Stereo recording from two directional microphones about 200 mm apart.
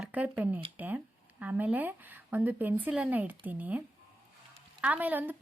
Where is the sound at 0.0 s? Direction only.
5° right (ahead or behind).